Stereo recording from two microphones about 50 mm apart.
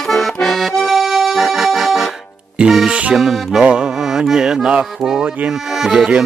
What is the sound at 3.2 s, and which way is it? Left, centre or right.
Music, centre.